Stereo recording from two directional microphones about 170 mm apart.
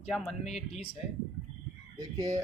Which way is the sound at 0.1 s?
Centre (ahead or behind).